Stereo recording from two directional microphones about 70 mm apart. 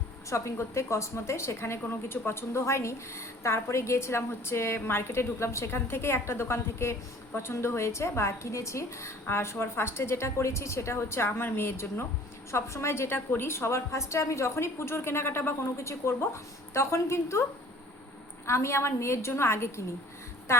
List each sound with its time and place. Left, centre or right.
0.3 s a woman's voice: left
18.4 s a woman's voice: left